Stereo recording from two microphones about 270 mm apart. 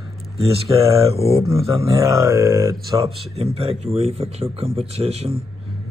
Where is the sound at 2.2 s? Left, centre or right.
Centre.